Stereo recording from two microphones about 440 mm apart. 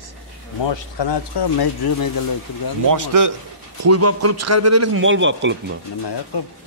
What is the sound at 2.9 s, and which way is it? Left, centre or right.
Speech, right.